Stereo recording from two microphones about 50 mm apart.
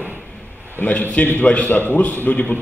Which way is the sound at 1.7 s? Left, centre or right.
Left.